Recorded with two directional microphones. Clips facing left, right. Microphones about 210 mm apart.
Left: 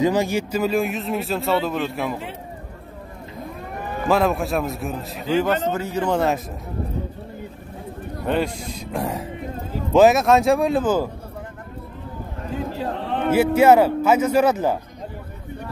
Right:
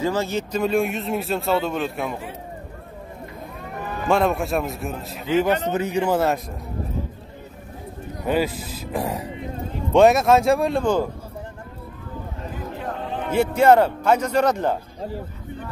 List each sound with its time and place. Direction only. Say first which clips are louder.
0.0 s speech: left 4 dB; 15° left (ahead or behind)
4.1 s a man's voice: even; centre (ahead or behind); by 6.1 s 15° right (ahead or behind)
6.1 s speech: left 2 dB; centre (ahead or behind)
8.3 s speech: right 1 dB; 5° right (ahead or behind)
13.0 s a sound: left 6 dB; 70° left (ahead or behind)
13.3 s speech: left 2 dB; 5° left (ahead or behind)